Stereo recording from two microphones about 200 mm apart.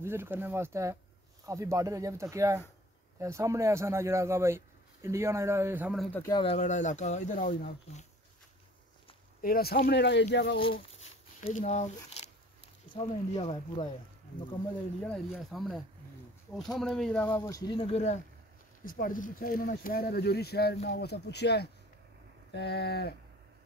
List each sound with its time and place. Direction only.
0.0 s a man's voice: 10° right (ahead or behind)
6.1 s speech: 20° left (ahead or behind)
6.6 s speech: 35° left (ahead or behind)
9.4 s speech: 50° left (ahead or behind)
11.0 s speech: 35° left (ahead or behind)
15.3 s speech: centre (ahead or behind); by 18.2 s 35° left (ahead or behind)
18.9 s speech: 45° left (ahead or behind)